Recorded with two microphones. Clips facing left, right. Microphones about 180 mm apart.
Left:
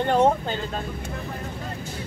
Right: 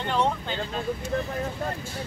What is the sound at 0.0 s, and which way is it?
Speech, 45° left (ahead or behind).